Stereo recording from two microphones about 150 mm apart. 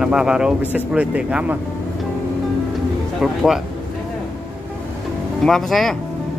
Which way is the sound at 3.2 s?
5° right (ahead or behind).